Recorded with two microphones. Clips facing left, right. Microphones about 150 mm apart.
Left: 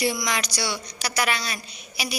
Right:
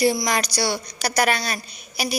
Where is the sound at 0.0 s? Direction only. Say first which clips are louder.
Right 5 dB; 35° right (ahead or behind).